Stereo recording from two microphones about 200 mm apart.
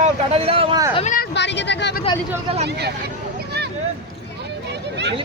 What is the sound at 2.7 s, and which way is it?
Speech, 55° right (ahead or behind).